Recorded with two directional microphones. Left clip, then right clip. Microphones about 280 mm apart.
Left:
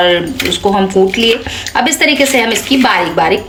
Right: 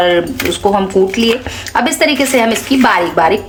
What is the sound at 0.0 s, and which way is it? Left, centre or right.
Speech, centre.